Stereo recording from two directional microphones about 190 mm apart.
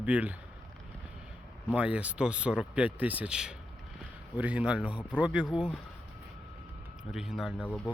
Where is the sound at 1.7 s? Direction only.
5° right (ahead or behind).